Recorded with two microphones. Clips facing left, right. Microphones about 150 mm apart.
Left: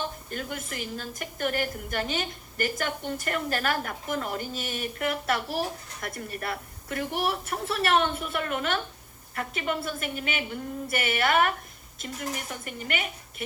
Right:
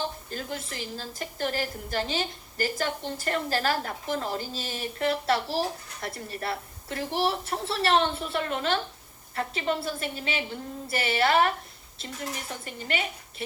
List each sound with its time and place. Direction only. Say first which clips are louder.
0.0 s a woman's voice: even; 30° right (ahead or behind)